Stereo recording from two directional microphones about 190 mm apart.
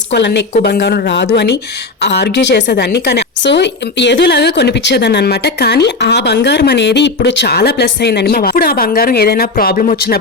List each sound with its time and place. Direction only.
0.1 s a woman's voice: 65° left (ahead or behind)